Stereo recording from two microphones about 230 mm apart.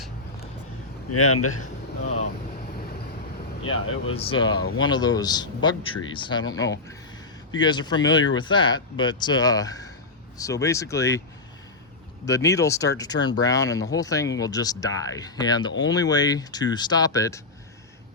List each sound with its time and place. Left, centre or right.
1.1 s speech: left
4.0 s speech: left
4.5 s speech: left
4.9 s speech: centre
12.2 s speech: centre